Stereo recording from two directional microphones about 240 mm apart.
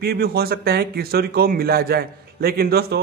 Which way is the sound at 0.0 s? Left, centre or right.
Right.